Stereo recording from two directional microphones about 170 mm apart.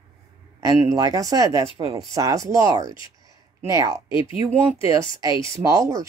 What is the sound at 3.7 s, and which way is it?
Speech, 20° right (ahead or behind).